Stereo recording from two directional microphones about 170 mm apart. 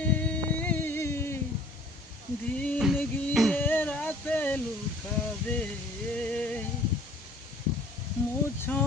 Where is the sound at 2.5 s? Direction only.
10° left (ahead or behind).